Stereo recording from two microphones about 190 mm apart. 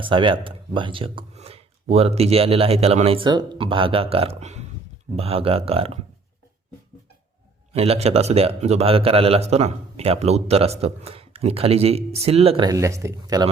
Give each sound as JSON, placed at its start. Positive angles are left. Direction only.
{"t": 0.0, "sound": "a man's voice", "side_deg": -25}
{"t": 7.7, "sound": "a man's voice", "side_deg": -30}